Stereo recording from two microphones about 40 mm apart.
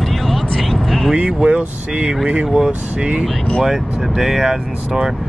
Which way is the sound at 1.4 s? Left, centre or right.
Right.